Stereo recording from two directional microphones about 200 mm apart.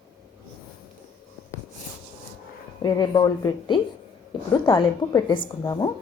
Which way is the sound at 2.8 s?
20° left (ahead or behind).